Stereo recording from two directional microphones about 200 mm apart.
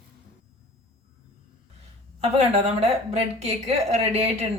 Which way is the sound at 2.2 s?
30° right (ahead or behind).